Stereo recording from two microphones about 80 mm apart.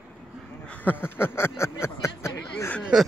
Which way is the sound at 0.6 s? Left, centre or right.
Left.